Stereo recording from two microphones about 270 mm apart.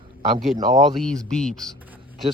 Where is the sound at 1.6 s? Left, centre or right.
Centre.